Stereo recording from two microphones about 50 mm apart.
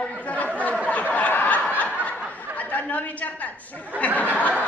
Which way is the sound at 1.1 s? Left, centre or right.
Left.